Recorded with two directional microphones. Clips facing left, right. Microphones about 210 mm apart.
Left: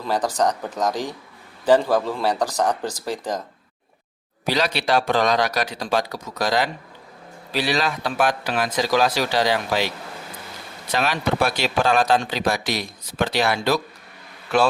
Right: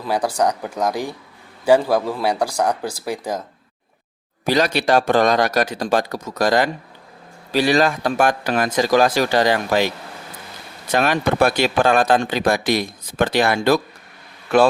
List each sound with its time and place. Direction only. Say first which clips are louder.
0.0 s speech: right 2 dB; 10° right (ahead or behind)
4.4 s speech: right 5 dB; 45° right (ahead or behind)
10.9 s speech: right 4 dB; 50° right (ahead or behind)